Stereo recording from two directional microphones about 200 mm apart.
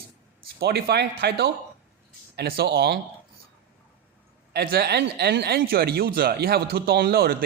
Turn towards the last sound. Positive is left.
turn(degrees=-50)  # may be behind; listen again after turning